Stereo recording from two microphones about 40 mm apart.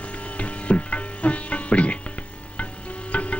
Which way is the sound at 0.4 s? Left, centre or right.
Left.